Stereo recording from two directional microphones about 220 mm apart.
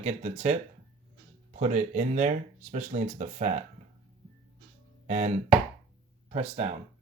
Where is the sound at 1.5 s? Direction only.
30° right (ahead or behind).